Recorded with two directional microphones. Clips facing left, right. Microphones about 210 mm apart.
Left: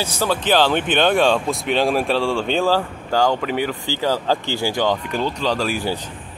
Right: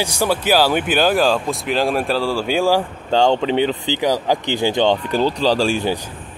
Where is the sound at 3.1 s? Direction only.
25° right (ahead or behind).